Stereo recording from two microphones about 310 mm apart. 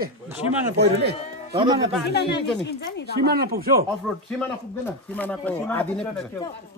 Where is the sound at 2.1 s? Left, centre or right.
Left.